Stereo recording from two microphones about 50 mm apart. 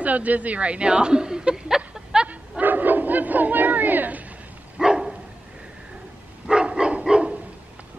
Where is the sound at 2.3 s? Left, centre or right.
Right.